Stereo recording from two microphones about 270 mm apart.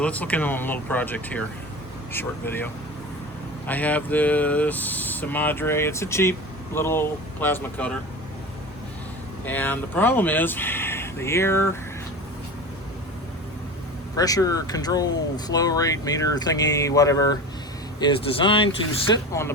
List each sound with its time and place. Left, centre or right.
0.0 s speech: centre
3.7 s speech: centre
9.5 s speech: centre
14.2 s speech: centre